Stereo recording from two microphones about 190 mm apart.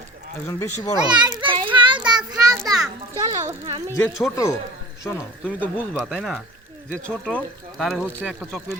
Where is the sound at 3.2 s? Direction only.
15° right (ahead or behind).